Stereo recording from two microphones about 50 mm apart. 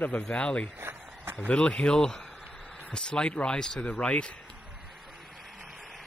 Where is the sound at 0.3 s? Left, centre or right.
Left.